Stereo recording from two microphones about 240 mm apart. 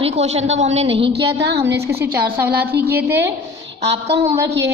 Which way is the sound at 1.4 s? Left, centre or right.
Right.